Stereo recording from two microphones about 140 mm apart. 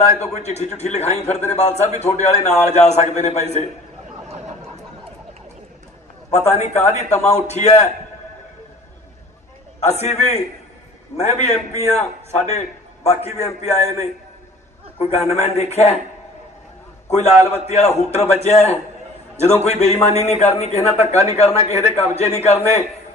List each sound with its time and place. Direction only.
0.2 s a man's voice: 50° left (ahead or behind)
6.3 s a man's voice: 50° left (ahead or behind)
9.8 s a man's voice: 50° left (ahead or behind)
15.0 s a man's voice: 50° left (ahead or behind)
17.1 s a man's voice: 50° left (ahead or behind)